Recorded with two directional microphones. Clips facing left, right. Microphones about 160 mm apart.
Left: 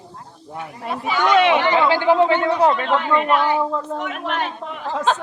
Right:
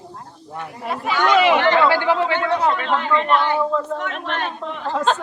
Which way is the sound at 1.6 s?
15° left (ahead or behind).